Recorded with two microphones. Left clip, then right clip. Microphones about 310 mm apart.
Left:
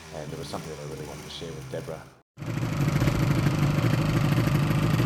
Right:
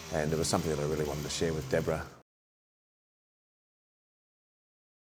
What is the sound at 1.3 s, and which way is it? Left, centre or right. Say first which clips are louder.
Speech: right 5 dB; right.